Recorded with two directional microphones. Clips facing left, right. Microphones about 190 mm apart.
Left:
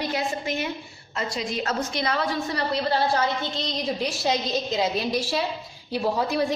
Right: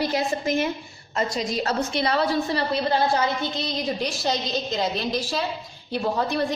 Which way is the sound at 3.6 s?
Centre (ahead or behind).